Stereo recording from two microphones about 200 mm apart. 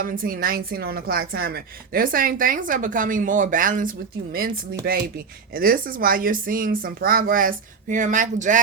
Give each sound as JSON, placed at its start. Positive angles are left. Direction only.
{"t": 0.0, "sound": "speech", "side_deg": -45}